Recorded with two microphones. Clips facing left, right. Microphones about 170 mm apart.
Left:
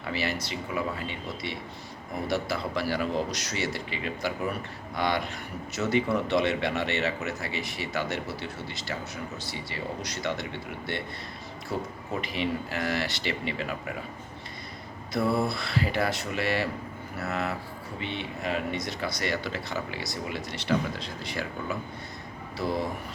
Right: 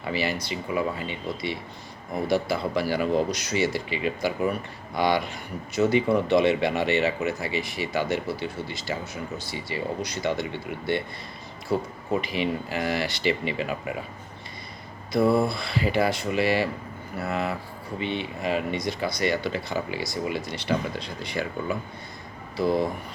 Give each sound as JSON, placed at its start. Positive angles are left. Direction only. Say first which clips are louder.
{"t": 0.0, "sound": "speech", "louder": "right 3 dB", "side_deg": 0}
{"t": 12.2, "sound": "speech", "louder": "right 3 dB", "side_deg": 0}
{"t": 15.2, "sound": "mantra", "louder": "right 5 dB", "side_deg": -25}
{"t": 15.4, "sound": "speech", "louder": "right 2 dB", "side_deg": 0}